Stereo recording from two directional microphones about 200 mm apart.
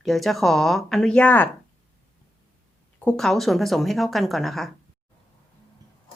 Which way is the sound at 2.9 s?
5° left (ahead or behind).